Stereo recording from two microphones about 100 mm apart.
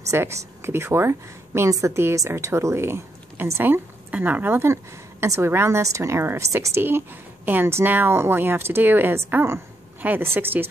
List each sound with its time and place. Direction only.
0.1 s speech: 30° right (ahead or behind)